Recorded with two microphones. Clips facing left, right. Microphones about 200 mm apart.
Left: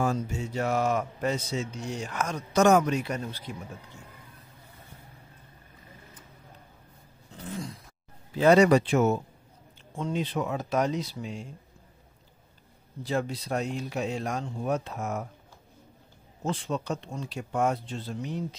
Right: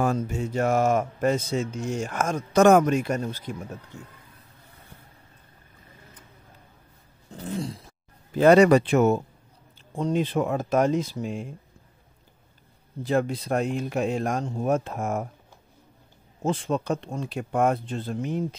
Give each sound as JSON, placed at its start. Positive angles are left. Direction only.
{"t": 0.0, "sound": "a man's voice", "side_deg": -55}
{"t": 7.4, "sound": "a sound", "side_deg": -30}
{"t": 8.4, "sound": "speech", "side_deg": -55}
{"t": 9.9, "sound": "a man's voice", "side_deg": -45}
{"t": 13.0, "sound": "a man's voice", "side_deg": -55}
{"t": 16.4, "sound": "speech", "side_deg": -55}